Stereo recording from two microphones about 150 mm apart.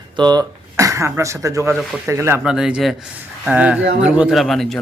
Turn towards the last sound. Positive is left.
turn(degrees=0)  # may be behind; listen again after turning